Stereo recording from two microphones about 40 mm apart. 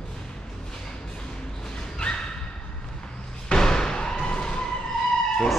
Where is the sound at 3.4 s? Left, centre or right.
Centre.